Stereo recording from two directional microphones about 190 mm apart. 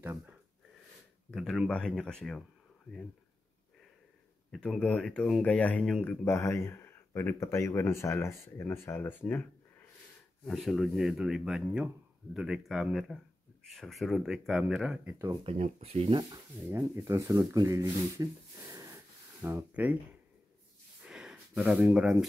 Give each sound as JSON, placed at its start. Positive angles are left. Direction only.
{"t": 0.0, "sound": "speech", "side_deg": -10}
{"t": 1.3, "sound": "speech", "side_deg": 0}
{"t": 4.6, "sound": "speech", "side_deg": 5}
{"t": 10.4, "sound": "speech", "side_deg": 0}
{"t": 15.0, "sound": "speech", "side_deg": -15}
{"t": 15.4, "sound": "speech", "side_deg": -35}
{"t": 16.2, "sound": "speech", "side_deg": -20}
{"t": 21.1, "sound": "a sound", "side_deg": -5}